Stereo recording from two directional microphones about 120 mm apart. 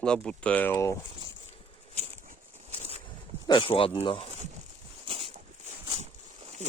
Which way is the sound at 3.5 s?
45° left (ahead or behind).